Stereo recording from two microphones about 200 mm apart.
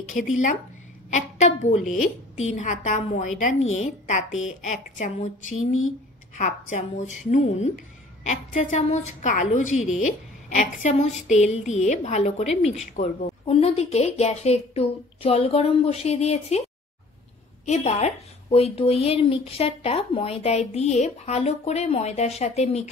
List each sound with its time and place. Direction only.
1.1 s a woman's voice: 35° left (ahead or behind)
3.6 s a woman's voice: 80° left
4.6 s a woman's voice: 35° left (ahead or behind)
5.5 s a sound: 90° left
6.3 s a woman's voice: 35° left (ahead or behind)
13.5 s a woman's voice: 30° left (ahead or behind)
17.6 s a woman's voice: 35° left (ahead or behind)